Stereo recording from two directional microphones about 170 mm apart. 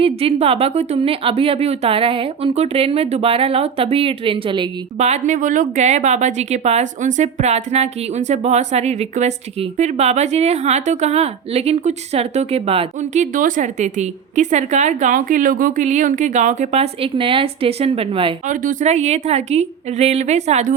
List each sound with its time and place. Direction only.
0.0 s a woman's voice: 35° right (ahead or behind)
4.9 s a woman's voice: 40° right (ahead or behind)
18.4 s a woman's voice: 50° right (ahead or behind)